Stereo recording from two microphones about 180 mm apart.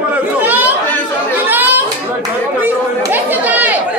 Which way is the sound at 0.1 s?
10° right (ahead or behind).